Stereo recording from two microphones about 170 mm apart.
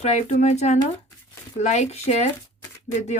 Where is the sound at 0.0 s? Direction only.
40° left (ahead or behind).